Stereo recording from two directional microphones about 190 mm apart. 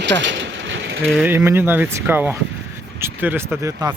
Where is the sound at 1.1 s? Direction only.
5° right (ahead or behind).